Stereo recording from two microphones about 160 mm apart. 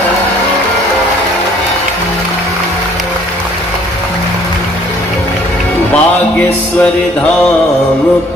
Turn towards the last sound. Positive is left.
turn(degrees=10)  # may be behind; listen again after turning